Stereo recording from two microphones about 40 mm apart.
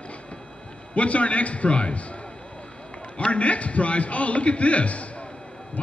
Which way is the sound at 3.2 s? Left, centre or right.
Left.